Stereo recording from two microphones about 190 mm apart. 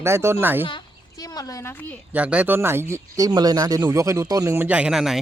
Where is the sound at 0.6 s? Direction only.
20° left (ahead or behind).